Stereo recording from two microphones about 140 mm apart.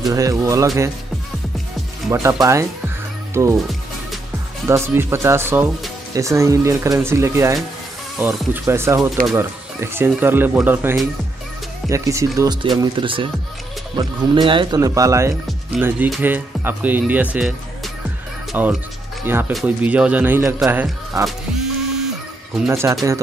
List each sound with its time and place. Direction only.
0.0 s speech: 25° right (ahead or behind)
2.0 s speech: 20° right (ahead or behind)
3.4 s speech: 20° right (ahead or behind)
4.6 s speech: 20° right (ahead or behind); by 14.8 s 35° right (ahead or behind)
14.8 s speech: 25° right (ahead or behind)
15.8 s speech: 5° right (ahead or behind)
21.3 s music: 5° right (ahead or behind)
22.7 s speech: 20° right (ahead or behind)